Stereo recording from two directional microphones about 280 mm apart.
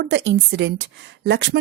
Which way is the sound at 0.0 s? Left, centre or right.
Right.